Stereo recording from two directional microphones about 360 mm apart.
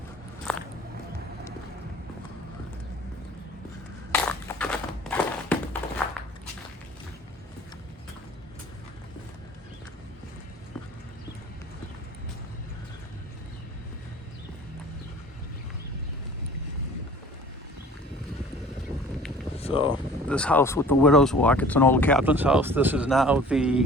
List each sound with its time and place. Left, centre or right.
0.5 s biting: centre
4.1 s a sound: centre
19.5 s vehicle: centre
20.2 s speech: centre